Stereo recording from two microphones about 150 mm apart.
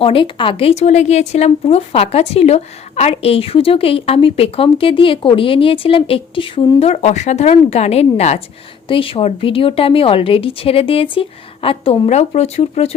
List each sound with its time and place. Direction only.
0.0 s speech: 35° left (ahead or behind)
8.9 s speech: 35° left (ahead or behind)
12.0 s speech: 50° left (ahead or behind)